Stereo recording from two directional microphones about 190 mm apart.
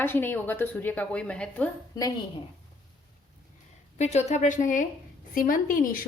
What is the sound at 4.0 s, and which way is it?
A woman's voice, 35° left (ahead or behind).